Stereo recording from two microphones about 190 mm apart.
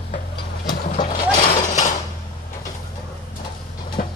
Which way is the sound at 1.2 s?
45° left (ahead or behind).